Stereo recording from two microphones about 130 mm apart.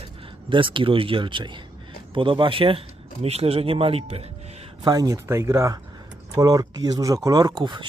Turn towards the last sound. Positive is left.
turn(degrees=-30)  # may be behind; listen again after turning